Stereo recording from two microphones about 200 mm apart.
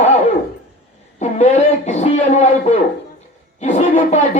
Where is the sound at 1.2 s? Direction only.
35° left (ahead or behind).